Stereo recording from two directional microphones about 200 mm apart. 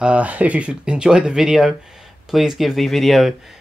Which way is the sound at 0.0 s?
5° right (ahead or behind).